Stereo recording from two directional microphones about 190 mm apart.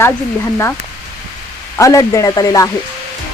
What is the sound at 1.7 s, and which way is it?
Speech, 15° left (ahead or behind).